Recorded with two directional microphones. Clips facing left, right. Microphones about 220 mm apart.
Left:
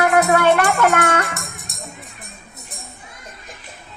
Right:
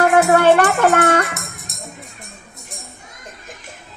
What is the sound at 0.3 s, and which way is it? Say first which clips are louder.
Music: right 3 dB; 40° right (ahead or behind).